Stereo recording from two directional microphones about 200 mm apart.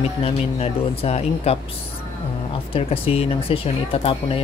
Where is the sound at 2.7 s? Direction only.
30° left (ahead or behind).